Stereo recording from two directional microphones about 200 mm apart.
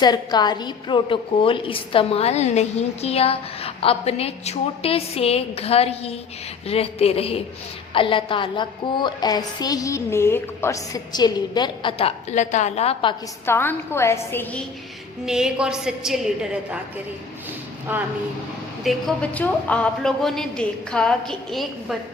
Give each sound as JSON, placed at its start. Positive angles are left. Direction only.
{"t": 0.0, "sound": "a woman's voice", "side_deg": 20}
{"t": 13.4, "sound": "a woman's voice", "side_deg": 10}
{"t": 15.3, "sound": "a woman's voice", "side_deg": -5}
{"t": 17.9, "sound": "speech", "side_deg": -10}
{"t": 18.9, "sound": "a woman's voice", "side_deg": 5}